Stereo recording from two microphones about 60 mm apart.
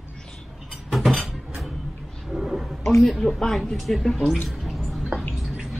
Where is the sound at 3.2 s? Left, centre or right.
Centre.